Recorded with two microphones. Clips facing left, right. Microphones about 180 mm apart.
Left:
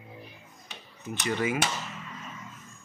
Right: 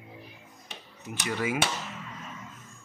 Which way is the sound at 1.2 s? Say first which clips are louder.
Left 2 dB; 5° right (ahead or behind).